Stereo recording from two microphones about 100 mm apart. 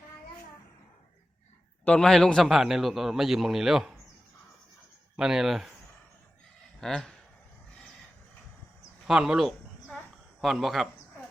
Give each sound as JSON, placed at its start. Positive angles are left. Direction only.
{"t": 1.8, "sound": "a man's voice", "side_deg": 10}
{"t": 5.1, "sound": "a man's voice", "side_deg": -5}
{"t": 6.7, "sound": "speech", "side_deg": 5}
{"t": 9.0, "sound": "a sound", "side_deg": -5}
{"t": 10.4, "sound": "a man's voice", "side_deg": 0}